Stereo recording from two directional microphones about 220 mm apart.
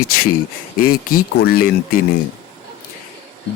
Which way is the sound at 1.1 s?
40° left (ahead or behind).